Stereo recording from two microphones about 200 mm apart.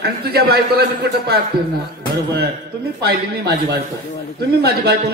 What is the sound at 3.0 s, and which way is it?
A man's voice, 55° right (ahead or behind).